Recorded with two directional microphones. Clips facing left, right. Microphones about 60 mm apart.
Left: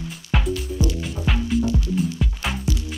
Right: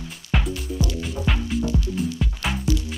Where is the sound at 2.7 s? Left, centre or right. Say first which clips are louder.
Right 5 dB; left.